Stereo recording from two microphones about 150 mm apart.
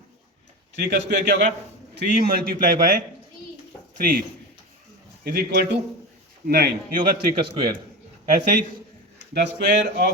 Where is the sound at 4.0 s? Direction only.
75° right (ahead or behind).